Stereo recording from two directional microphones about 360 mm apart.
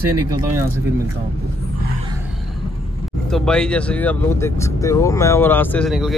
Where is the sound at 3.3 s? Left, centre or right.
Centre.